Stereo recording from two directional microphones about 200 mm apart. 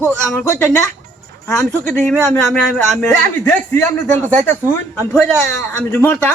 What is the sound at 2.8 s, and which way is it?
A man's voice, 10° left (ahead or behind).